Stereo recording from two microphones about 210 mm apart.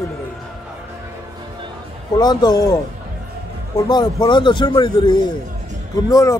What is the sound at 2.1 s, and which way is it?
Speech, 20° left (ahead or behind).